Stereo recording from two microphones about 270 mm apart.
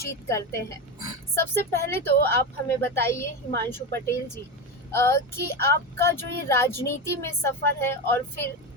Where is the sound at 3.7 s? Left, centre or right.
Centre.